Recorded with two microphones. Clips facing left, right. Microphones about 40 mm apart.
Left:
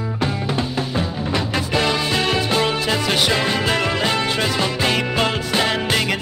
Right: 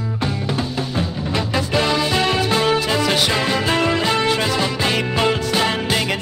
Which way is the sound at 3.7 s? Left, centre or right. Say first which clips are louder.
Right 2 dB; left.